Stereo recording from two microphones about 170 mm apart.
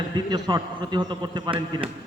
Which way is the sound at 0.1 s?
25° right (ahead or behind).